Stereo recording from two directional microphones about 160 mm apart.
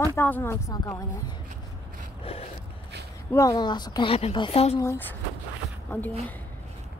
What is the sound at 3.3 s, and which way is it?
A woman's voice, 25° left (ahead or behind).